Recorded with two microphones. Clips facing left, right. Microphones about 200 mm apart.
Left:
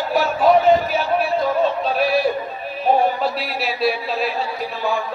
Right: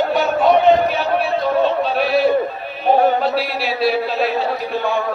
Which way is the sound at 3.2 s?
Centre (ahead or behind).